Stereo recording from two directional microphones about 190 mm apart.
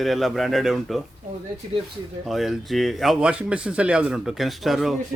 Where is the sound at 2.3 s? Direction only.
Centre (ahead or behind).